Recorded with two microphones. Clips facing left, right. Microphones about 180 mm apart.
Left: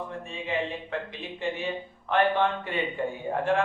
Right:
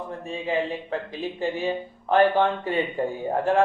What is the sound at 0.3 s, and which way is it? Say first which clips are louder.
Speech: right 6 dB; 35° right (ahead or behind).